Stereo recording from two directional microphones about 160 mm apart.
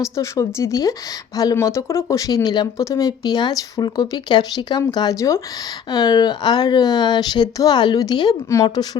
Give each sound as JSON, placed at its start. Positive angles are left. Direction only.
{"t": 0.0, "sound": "speech", "side_deg": 20}